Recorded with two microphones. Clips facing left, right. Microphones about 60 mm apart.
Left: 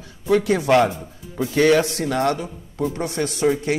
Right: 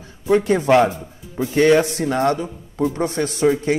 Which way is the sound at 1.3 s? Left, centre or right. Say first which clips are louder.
Right 2 dB; right.